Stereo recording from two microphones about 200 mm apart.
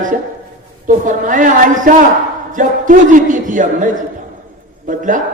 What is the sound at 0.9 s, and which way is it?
A man's voice, 40° right (ahead or behind).